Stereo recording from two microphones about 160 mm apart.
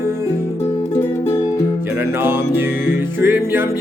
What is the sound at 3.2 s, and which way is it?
Music, 15° right (ahead or behind).